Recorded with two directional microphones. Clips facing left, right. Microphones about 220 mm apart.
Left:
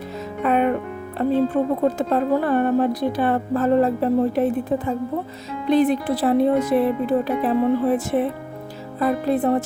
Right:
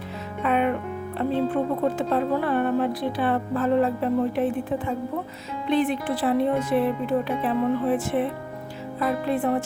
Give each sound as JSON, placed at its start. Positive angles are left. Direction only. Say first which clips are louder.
{"t": 0.4, "sound": "music", "louder": "left 3 dB", "side_deg": 40}
{"t": 2.0, "sound": "speech", "louder": "left 3 dB", "side_deg": 45}